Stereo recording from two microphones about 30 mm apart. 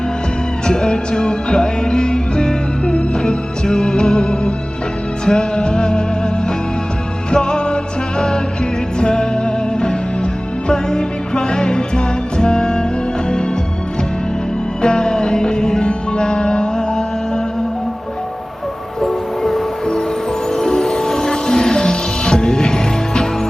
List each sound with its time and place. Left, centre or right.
0.7 s music: left
7.3 s music: left
9.0 s music: left
14.8 s music: left
19.0 s train: centre
20.6 s music: centre